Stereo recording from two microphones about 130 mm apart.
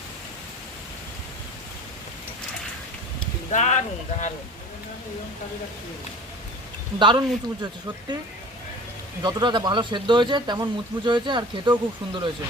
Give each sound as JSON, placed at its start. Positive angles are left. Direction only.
{"t": 3.5, "sound": "speech", "side_deg": 70}
{"t": 7.0, "sound": "speech", "side_deg": -35}
{"t": 9.2, "sound": "speech", "side_deg": -35}